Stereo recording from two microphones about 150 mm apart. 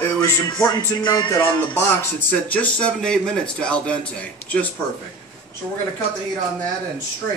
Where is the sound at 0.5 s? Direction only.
30° left (ahead or behind).